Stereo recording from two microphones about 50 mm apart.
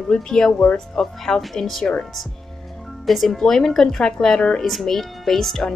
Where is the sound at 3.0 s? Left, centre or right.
Centre.